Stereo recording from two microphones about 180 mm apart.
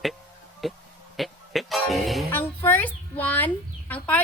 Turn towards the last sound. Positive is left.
turn(degrees=10)  # may be behind; listen again after turning